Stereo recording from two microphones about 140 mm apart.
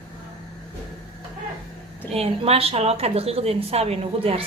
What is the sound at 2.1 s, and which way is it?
Speech, 45° right (ahead or behind).